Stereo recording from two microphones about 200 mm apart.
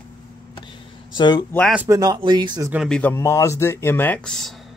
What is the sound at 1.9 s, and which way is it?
Speech, 20° right (ahead or behind).